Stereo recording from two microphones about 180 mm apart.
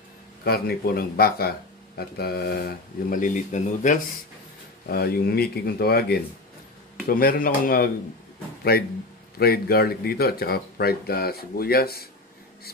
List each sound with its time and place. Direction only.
0.4 s speech: 60° left (ahead or behind); by 4.0 s 45° left (ahead or behind)
4.8 s speech: 60° left (ahead or behind)